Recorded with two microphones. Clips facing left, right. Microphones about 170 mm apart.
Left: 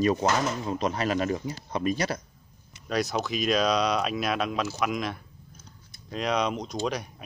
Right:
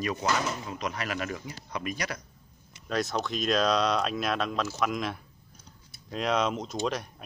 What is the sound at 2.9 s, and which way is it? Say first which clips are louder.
A man's voice: left 2 dB; centre (ahead or behind).